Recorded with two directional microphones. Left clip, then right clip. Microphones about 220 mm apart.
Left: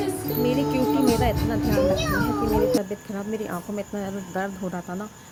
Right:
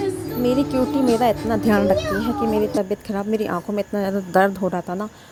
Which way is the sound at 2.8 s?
35° right (ahead or behind).